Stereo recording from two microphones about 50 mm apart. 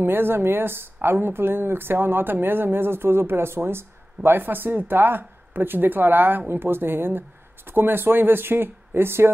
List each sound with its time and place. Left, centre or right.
0.0 s speech: right